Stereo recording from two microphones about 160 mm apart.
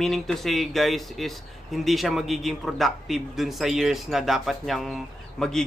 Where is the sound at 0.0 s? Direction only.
Centre (ahead or behind).